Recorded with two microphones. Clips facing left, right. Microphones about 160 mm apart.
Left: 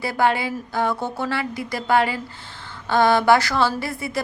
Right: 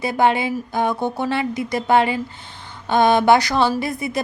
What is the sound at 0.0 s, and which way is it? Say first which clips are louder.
A woman's voice: right 3 dB; 20° right (ahead or behind).